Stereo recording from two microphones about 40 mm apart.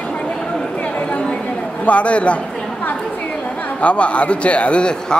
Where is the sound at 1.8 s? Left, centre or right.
Left.